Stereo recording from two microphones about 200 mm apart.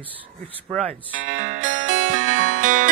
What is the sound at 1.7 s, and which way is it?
Music, 75° right (ahead or behind).